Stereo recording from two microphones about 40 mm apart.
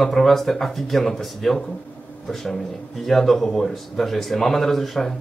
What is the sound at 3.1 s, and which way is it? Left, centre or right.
A man's voice, centre.